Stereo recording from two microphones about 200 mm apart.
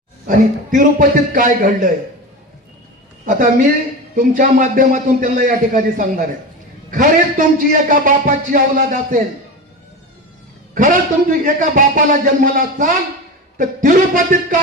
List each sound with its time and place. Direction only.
0.3 s a man's voice: 40° right (ahead or behind)
3.2 s a woman's voice: 40° right (ahead or behind)
10.8 s a man's voice: 40° right (ahead or behind)